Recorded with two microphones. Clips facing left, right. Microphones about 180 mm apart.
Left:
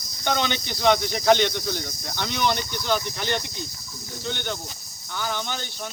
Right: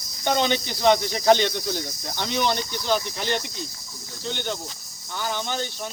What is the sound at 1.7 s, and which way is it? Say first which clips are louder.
Cricket: right 1 dB; 30° right (ahead or behind).